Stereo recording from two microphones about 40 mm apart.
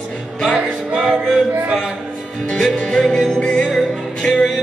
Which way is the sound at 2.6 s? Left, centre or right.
Centre.